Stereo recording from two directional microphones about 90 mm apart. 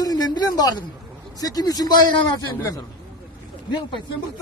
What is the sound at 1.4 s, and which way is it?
Speech, 45° left (ahead or behind).